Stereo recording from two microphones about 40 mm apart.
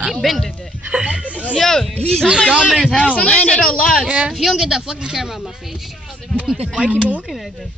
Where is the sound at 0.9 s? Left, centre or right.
Right.